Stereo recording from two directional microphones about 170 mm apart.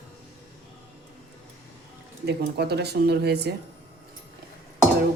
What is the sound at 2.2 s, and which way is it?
A woman's voice, 75° right (ahead or behind).